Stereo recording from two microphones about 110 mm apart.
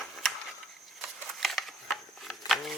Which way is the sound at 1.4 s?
Centre (ahead or behind).